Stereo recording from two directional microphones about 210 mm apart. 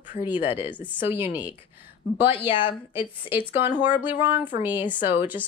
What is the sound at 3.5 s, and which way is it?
A woman's voice, 10° right (ahead or behind).